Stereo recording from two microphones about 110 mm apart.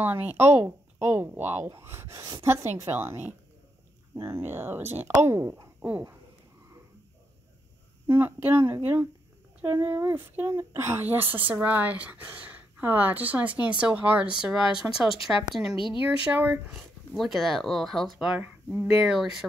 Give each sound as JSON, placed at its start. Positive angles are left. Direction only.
{"t": 0.0, "sound": "speech", "side_deg": -15}
{"t": 2.1, "sound": "a woman's voice", "side_deg": -40}
{"t": 2.4, "sound": "speech", "side_deg": -20}
{"t": 5.8, "sound": "a sound", "side_deg": -20}
{"t": 8.1, "sound": "speech", "side_deg": -20}
{"t": 16.3, "sound": "speech", "side_deg": -15}
{"t": 17.1, "sound": "speech", "side_deg": 0}
{"t": 18.4, "sound": "speech", "side_deg": -15}